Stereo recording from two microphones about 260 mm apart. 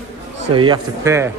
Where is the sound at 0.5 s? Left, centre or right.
Centre.